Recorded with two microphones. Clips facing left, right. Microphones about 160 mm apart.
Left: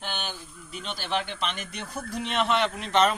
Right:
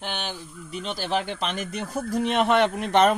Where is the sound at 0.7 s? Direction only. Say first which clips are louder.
Right 4 dB; 35° right (ahead or behind).